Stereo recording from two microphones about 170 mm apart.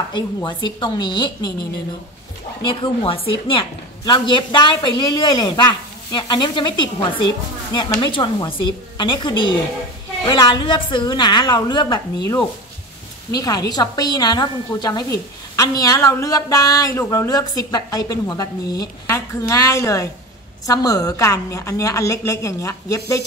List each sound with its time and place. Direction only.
0.1 s a woman's voice: 25° left (ahead or behind)
13.4 s a woman's voice: 25° left (ahead or behind)